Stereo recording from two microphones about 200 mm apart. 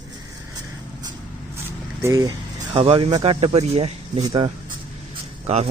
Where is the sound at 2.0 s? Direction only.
15° right (ahead or behind); by 5.7 s 30° right (ahead or behind).